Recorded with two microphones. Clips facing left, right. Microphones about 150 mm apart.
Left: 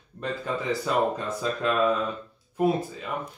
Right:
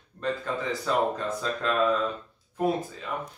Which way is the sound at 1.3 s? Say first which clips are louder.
Left 2 dB; 5° left (ahead or behind).